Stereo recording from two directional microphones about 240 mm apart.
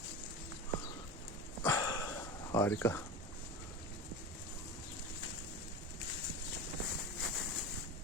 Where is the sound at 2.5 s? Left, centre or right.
Centre.